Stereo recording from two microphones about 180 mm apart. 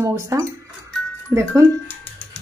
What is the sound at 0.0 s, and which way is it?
Speech, 15° right (ahead or behind).